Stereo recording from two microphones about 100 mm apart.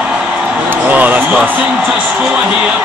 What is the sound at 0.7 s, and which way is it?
Speech, 15° right (ahead or behind).